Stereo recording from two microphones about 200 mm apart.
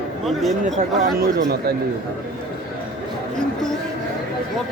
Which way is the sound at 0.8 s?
45° right (ahead or behind).